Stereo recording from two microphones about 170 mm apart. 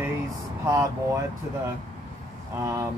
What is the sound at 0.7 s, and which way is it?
Speech, 15° right (ahead or behind).